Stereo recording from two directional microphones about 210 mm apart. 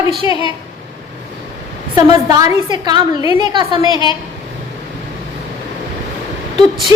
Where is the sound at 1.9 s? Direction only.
20° right (ahead or behind).